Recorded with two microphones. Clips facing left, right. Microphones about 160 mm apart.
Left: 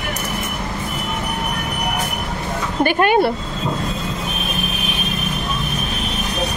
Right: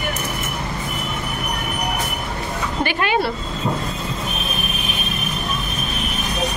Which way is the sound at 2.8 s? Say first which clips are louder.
Left 6 dB; 50° left (ahead or behind).